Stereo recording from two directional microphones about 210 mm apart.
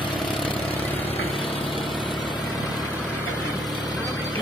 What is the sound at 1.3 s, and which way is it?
Vehicle, 25° left (ahead or behind).